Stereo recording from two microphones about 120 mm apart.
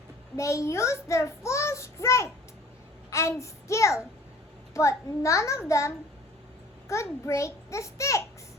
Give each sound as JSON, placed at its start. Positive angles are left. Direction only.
{"t": 0.3, "sound": "a child's voice", "side_deg": 25}